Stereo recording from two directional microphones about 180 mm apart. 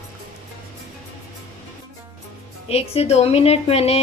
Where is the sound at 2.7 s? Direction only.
35° left (ahead or behind).